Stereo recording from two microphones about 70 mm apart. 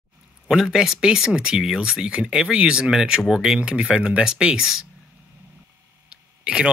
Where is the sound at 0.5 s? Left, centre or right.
Centre.